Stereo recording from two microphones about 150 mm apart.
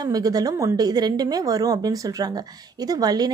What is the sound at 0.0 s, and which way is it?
Speech, 25° right (ahead or behind).